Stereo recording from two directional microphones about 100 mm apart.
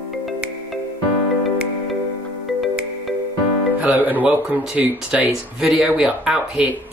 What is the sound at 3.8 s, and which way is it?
Speech, 15° right (ahead or behind).